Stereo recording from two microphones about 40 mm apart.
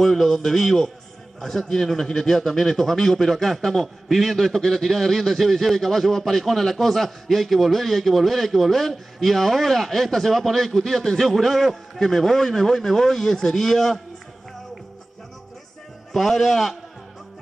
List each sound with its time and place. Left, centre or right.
0.0 s a man's voice: centre
16.1 s a man's voice: centre